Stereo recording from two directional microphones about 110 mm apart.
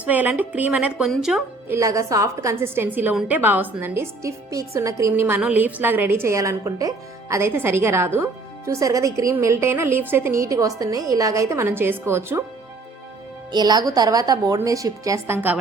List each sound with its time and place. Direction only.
0.0 s a woman's voice: 15° right (ahead or behind)
1.6 s a woman's voice: 25° right (ahead or behind)
5.4 s a woman's voice: 15° right (ahead or behind)
13.5 s a woman's voice: 40° right (ahead or behind)